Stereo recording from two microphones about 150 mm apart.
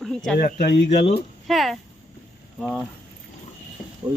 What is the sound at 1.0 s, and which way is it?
Speech, 40° left (ahead or behind).